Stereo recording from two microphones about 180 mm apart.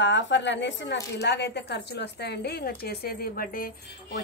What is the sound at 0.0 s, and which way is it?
Speech, 90° left.